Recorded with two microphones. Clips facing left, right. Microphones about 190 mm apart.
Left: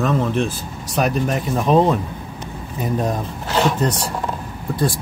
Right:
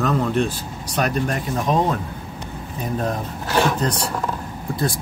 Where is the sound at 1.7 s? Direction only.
30° left (ahead or behind).